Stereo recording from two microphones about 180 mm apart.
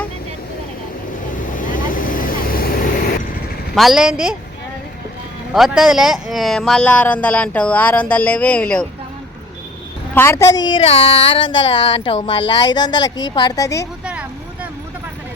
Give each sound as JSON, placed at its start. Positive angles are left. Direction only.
{"t": 1.5, "sound": "vehicle", "side_deg": 50}
{"t": 3.8, "sound": "a woman's voice", "side_deg": 0}
{"t": 5.5, "sound": "speech", "side_deg": 0}
{"t": 10.2, "sound": "speech", "side_deg": 15}
{"t": 14.0, "sound": "vehicle", "side_deg": -5}